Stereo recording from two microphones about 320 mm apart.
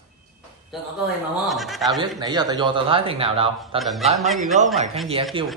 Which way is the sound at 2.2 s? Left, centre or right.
Centre.